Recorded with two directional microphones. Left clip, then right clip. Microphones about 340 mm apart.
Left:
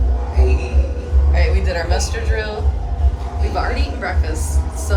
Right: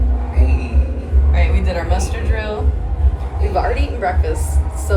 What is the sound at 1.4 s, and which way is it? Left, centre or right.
A woman's voice, centre.